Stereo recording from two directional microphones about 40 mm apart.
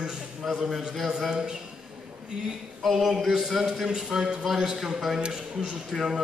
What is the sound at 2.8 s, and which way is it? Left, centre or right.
Speech, centre.